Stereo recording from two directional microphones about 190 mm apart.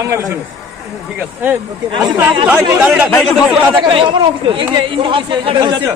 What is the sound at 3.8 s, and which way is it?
A man's voice, 25° right (ahead or behind).